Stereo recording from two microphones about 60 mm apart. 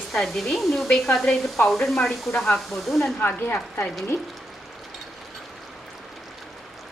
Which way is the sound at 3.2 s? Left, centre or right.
Left.